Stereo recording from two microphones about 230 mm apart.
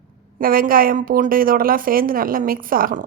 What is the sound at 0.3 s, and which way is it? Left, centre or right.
A woman's voice, right.